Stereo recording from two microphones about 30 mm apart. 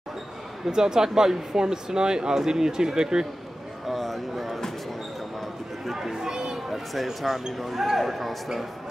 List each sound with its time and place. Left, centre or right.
0.7 s speech: right
3.8 s speech: centre
5.9 s speech: centre
6.4 s children playing: centre
7.2 s speech: centre
7.5 s speech: centre